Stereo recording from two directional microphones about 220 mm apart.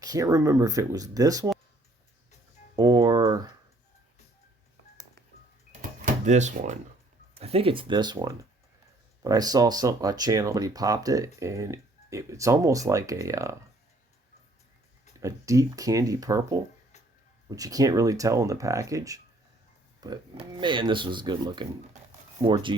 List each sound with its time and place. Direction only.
0.0 s speech: 15° right (ahead or behind)
2.7 s a sound: 15° right (ahead or behind)
6.2 s speech: 30° right (ahead or behind); by 13.6 s 15° right (ahead or behind)
15.2 s speech: 15° right (ahead or behind)